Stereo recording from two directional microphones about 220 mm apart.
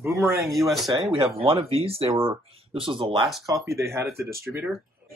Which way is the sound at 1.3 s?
25° right (ahead or behind).